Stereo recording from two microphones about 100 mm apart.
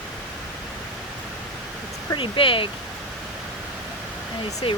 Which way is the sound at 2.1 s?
55° left (ahead or behind).